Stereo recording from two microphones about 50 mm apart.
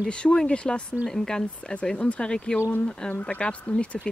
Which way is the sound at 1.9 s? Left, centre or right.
Left.